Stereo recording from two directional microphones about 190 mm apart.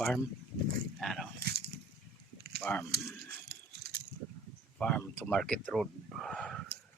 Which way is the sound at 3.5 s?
55° right (ahead or behind).